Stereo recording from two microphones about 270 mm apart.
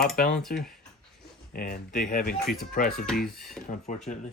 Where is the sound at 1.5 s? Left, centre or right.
Left.